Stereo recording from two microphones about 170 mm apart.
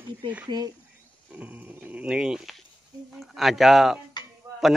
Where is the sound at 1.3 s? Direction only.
10° right (ahead or behind).